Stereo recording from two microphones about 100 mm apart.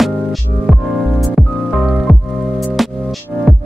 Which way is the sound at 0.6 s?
Centre (ahead or behind).